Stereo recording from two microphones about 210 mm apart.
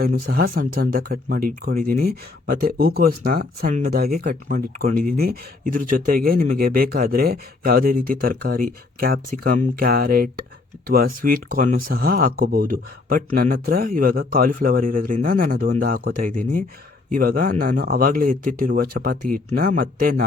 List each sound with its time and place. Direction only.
0.3 s speech: 45° right (ahead or behind)